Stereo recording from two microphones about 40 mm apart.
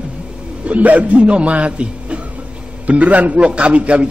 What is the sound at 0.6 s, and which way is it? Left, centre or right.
A man's voice, right.